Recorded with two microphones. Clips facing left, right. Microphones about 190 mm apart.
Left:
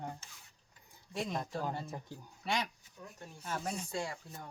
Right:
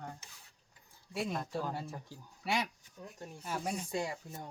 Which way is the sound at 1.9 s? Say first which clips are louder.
Left 2 dB; 20° left (ahead or behind).